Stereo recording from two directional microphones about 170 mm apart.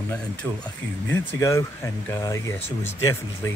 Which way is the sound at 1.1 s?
15° left (ahead or behind).